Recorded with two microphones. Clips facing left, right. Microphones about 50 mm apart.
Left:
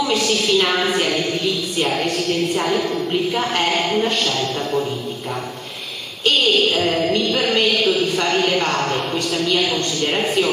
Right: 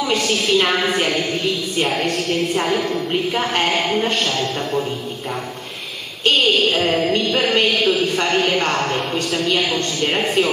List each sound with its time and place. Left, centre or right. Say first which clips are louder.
0.3 s a woman's voice: right 2 dB; centre
1.8 s a woman's voice: right 1 dB; centre
3.5 s a man's voice: right 1 dB; centre
6.7 s a woman's voice: right 1 dB; centre